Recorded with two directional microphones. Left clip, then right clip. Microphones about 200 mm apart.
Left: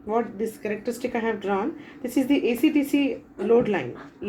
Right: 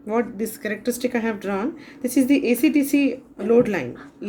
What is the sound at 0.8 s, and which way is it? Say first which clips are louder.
Speech: right 4 dB; 40° right (ahead or behind).